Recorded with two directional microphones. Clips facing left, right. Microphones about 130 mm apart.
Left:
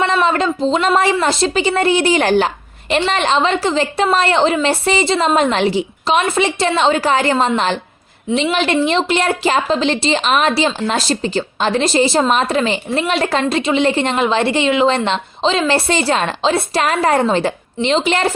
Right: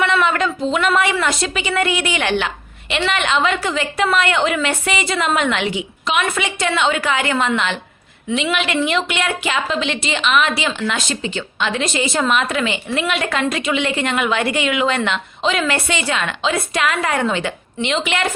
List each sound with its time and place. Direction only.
0.0 s speech: 30° left (ahead or behind)